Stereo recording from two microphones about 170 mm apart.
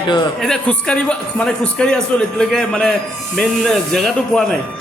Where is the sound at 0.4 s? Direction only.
5° left (ahead or behind).